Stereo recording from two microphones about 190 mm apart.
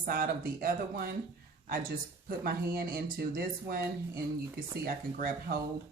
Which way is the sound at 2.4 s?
50° right (ahead or behind).